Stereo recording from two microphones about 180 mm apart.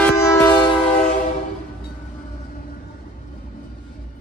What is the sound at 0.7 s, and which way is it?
Train, 35° left (ahead or behind).